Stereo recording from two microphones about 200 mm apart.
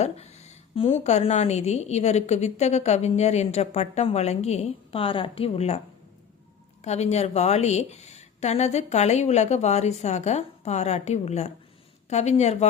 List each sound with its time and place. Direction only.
0.0 s a woman's voice: 30° left (ahead or behind)
6.8 s a woman's voice: 35° left (ahead or behind)